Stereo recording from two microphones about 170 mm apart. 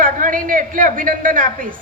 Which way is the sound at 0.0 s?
50° right (ahead or behind).